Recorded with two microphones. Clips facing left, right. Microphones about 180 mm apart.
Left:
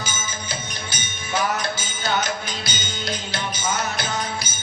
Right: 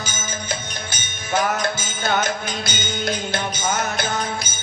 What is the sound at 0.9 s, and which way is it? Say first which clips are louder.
Music: right 5 dB; 50° right (ahead or behind).